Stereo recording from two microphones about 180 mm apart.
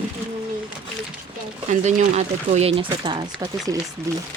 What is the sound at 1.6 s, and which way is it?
Speech, 40° right (ahead or behind).